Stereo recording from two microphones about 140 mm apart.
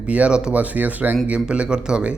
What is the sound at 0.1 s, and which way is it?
A man's voice, 5° right (ahead or behind).